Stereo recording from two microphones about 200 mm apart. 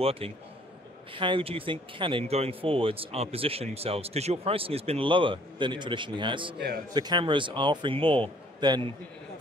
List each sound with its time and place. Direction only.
0.0 s speech: 30° right (ahead or behind)